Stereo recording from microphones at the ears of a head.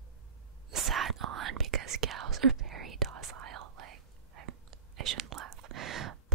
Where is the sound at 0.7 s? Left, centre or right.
Right.